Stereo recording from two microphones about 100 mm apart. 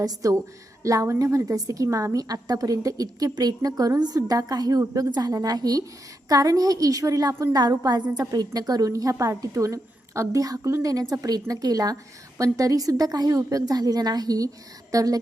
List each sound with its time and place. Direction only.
0.0 s a woman's voice: 35° right (ahead or behind)